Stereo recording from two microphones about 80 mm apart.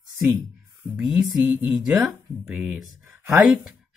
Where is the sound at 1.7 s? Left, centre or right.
Centre.